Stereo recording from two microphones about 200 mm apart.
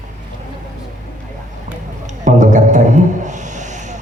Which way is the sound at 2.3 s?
35° right (ahead or behind).